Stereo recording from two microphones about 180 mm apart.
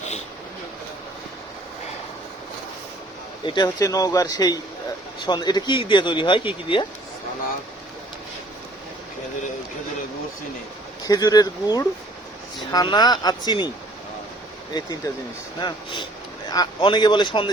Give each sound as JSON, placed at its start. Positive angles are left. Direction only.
{"t": 3.4, "sound": "speech", "side_deg": 25}
{"t": 11.0, "sound": "speech", "side_deg": 20}
{"t": 14.7, "sound": "speech", "side_deg": 20}